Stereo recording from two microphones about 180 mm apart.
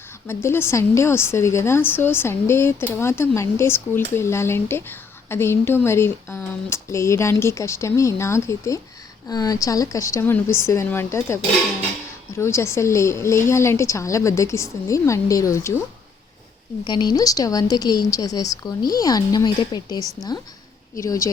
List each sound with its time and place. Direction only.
0.3 s a woman's voice: 15° left (ahead or behind)
12.4 s a woman's voice: 15° left (ahead or behind)
16.8 s a woman's voice: 25° left (ahead or behind)